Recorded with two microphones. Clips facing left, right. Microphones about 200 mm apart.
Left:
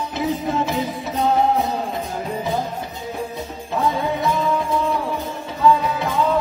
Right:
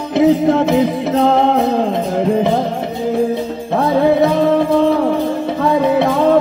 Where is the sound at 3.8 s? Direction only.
80° right.